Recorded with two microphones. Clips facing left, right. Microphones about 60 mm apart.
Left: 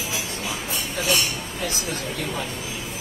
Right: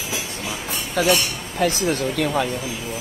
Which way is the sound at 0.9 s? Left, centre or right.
Right.